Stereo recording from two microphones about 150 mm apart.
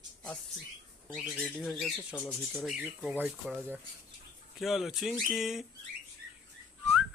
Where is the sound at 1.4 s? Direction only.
5° left (ahead or behind).